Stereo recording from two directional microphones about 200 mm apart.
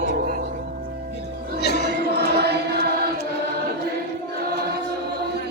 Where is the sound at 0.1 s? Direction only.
45° right (ahead or behind).